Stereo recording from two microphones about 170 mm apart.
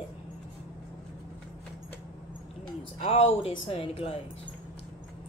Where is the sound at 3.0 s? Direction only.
35° left (ahead or behind).